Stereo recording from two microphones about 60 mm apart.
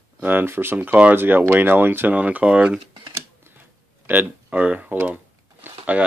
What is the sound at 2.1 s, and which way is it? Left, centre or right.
Speech, right.